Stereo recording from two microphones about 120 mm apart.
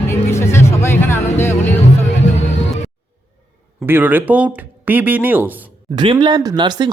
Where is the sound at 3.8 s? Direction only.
15° right (ahead or behind).